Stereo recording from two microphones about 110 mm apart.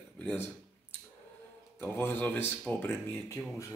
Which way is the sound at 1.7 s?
15° left (ahead or behind).